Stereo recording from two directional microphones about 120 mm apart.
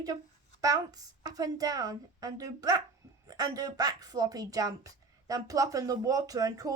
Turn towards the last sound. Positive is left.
turn(degrees=-30)  # may be behind; listen again after turning